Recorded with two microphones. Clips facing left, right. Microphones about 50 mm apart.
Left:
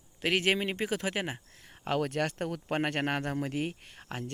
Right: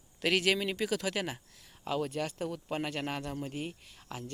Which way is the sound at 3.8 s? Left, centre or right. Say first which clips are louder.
Left 4 dB; left.